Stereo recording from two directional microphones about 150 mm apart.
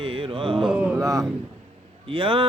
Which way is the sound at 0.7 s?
10° right (ahead or behind).